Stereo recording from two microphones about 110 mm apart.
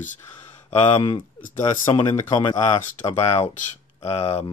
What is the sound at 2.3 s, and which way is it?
Speech, 40° left (ahead or behind).